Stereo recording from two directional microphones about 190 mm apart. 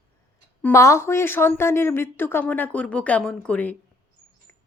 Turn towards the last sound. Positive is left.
turn(degrees=5)  # may be behind; listen again after turning